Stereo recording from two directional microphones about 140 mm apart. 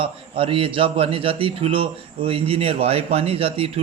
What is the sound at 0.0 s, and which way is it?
A man's voice, 40° right (ahead or behind).